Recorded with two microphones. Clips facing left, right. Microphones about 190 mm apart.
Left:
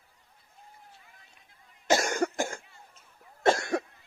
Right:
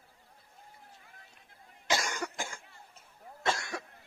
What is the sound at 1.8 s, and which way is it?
Cough, 45° left (ahead or behind).